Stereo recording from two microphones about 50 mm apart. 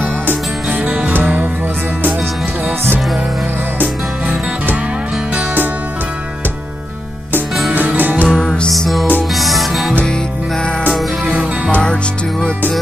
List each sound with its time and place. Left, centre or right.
0.7 s music: right
3.8 s music: right
7.7 s music: right
8.3 s music: centre
11.2 s music: right
11.8 s music: centre